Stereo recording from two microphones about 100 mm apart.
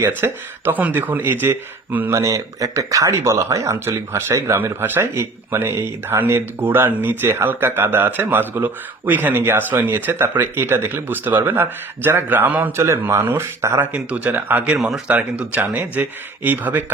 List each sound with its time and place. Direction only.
0.0 s speech: 20° right (ahead or behind)
12.7 s speech: 30° right (ahead or behind)
14.8 s speech: 5° right (ahead or behind)
15.1 s speech: 15° right (ahead or behind)